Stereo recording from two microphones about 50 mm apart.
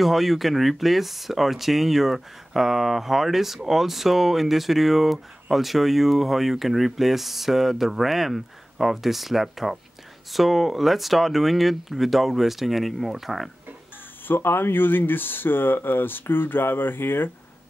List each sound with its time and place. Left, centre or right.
0.0 s speech: centre
14.2 s speech: left